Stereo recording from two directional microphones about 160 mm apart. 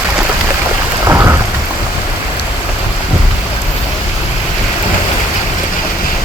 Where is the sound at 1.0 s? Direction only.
15° right (ahead or behind).